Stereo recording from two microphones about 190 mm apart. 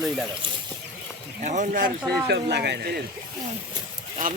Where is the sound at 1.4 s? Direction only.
40° right (ahead or behind).